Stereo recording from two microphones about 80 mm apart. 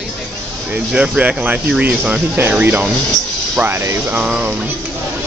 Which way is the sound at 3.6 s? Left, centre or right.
Right.